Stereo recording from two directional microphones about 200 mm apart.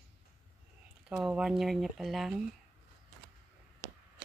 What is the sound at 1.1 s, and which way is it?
Speech, 5° right (ahead or behind).